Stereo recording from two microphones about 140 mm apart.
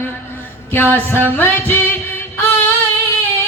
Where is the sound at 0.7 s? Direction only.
15° left (ahead or behind).